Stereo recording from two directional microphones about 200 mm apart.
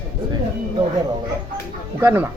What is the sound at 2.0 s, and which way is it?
Speech, 10° right (ahead or behind).